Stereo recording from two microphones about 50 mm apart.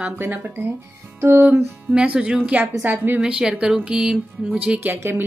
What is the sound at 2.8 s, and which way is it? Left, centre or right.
Speech, right.